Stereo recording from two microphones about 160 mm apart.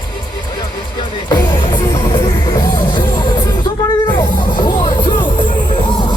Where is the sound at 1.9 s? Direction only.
25° left (ahead or behind).